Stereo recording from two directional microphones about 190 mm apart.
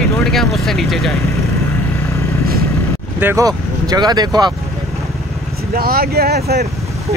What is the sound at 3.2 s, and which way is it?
Speech, 15° right (ahead or behind).